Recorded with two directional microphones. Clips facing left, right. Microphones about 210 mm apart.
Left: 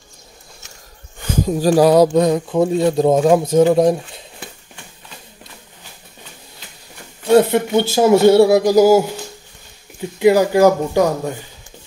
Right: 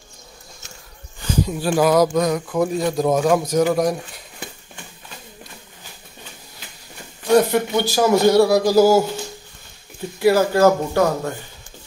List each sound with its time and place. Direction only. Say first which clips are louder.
1.2 s speech: left 5 dB; 45° left (ahead or behind); by 4.2 s 25° left (ahead or behind)
7.2 s speech: left 3 dB; 25° left (ahead or behind)